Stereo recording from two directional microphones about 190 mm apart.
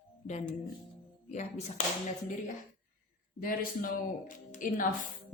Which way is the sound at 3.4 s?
50° left (ahead or behind).